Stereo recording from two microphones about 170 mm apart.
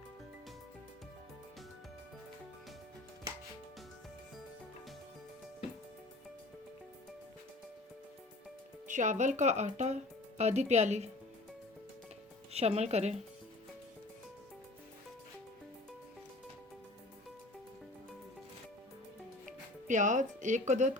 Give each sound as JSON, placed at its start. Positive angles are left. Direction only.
{"t": 8.9, "sound": "speech", "side_deg": -45}
{"t": 12.5, "sound": "speech", "side_deg": -40}
{"t": 19.9, "sound": "speech", "side_deg": -45}